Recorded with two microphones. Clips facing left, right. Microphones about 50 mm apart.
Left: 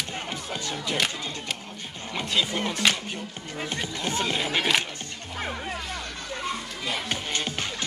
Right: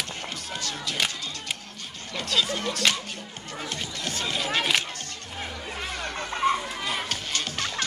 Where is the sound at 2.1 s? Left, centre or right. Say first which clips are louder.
Even; centre.